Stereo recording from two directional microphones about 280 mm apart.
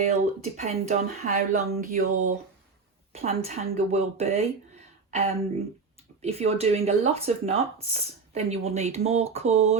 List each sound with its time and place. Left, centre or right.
0.0 s speech: right